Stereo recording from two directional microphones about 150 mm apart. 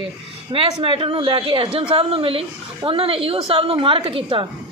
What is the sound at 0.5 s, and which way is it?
A woman's voice, 35° right (ahead or behind).